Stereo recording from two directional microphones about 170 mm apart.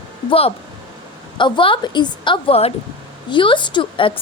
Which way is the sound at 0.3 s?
35° left (ahead or behind).